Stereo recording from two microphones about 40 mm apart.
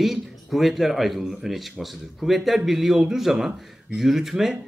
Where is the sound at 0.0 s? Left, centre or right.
Centre.